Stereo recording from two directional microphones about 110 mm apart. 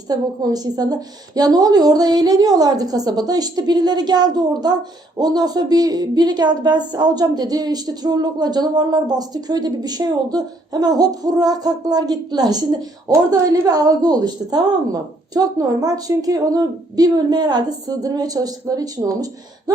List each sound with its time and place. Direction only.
0.1 s a woman's voice: 35° right (ahead or behind)